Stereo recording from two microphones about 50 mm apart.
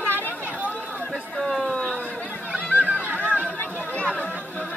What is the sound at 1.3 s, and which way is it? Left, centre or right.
Speech, centre.